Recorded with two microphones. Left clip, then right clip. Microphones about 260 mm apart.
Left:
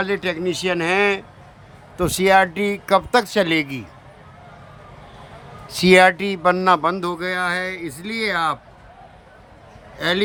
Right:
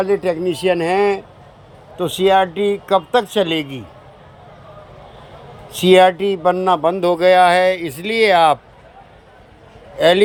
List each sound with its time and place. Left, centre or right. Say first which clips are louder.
0.0 s speech: right 5 dB; centre
2.2 s speech: right 2 dB; centre
5.6 s speech: right 2 dB; centre
10.0 s speech: right 9 dB; centre